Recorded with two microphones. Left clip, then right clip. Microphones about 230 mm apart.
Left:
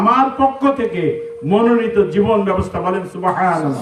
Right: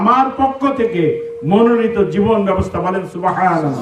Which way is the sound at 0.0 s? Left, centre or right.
Centre.